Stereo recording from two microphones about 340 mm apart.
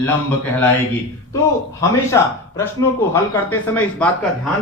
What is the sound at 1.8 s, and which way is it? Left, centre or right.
A man's voice, centre.